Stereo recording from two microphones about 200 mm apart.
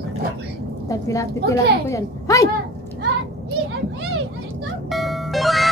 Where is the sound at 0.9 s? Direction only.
15° left (ahead or behind).